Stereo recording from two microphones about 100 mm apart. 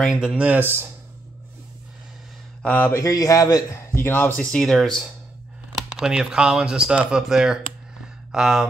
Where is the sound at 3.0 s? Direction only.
35° left (ahead or behind).